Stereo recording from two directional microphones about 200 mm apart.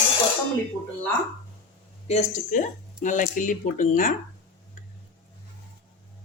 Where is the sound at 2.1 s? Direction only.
35° left (ahead or behind).